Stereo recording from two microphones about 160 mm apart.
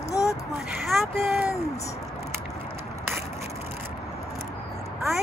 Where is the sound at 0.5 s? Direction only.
Centre (ahead or behind).